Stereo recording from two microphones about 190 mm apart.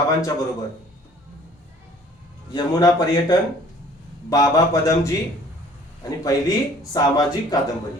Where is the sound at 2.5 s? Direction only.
20° left (ahead or behind).